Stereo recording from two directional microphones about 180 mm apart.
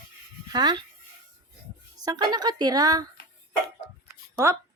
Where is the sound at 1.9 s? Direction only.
20° right (ahead or behind).